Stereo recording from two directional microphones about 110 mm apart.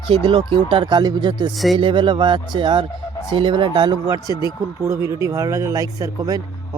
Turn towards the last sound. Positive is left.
turn(degrees=-35)  # may be behind; listen again after turning